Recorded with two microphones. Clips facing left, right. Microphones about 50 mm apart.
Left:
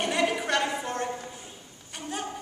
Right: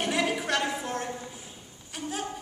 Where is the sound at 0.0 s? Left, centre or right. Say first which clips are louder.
Left 1 dB; centre.